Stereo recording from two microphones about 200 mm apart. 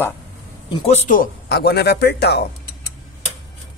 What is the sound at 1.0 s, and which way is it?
Speech, 45° left (ahead or behind).